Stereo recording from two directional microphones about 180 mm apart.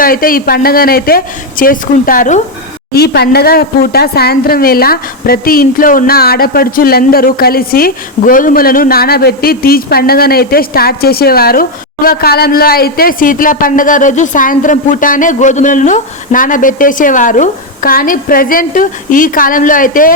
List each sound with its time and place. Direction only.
0.0 s speech: 50° left (ahead or behind)
2.9 s speech: 60° left (ahead or behind)